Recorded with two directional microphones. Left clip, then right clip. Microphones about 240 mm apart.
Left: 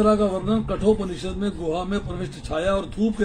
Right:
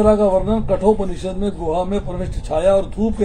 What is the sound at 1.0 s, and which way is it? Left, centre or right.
Speech, centre.